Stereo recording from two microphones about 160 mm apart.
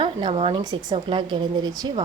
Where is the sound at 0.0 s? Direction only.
30° right (ahead or behind).